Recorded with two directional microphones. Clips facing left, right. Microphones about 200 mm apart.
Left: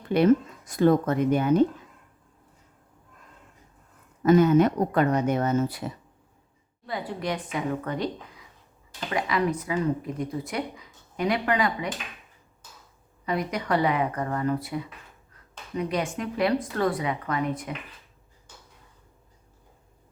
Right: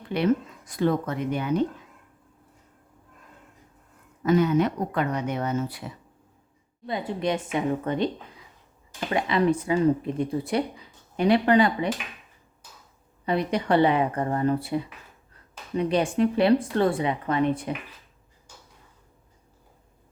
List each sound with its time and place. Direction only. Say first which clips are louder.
0.1 s speech: left 4 dB; 45° left (ahead or behind)
4.2 s speech: left 3 dB; 45° left (ahead or behind)
6.8 s speech: right 3 dB; 20° right (ahead or behind)
13.2 s speech: right 3 dB; 30° right (ahead or behind)